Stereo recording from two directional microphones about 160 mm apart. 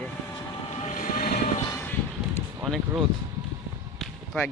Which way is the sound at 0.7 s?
45° left (ahead or behind).